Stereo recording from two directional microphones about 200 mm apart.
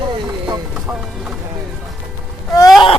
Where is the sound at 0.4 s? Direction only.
10° right (ahead or behind).